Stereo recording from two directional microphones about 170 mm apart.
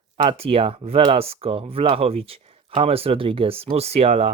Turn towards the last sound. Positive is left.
turn(degrees=-35)  # may be behind; listen again after turning